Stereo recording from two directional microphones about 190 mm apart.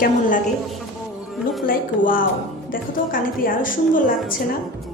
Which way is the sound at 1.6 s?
50° left (ahead or behind).